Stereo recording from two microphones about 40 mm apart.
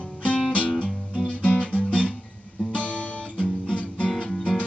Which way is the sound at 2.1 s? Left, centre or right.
Centre.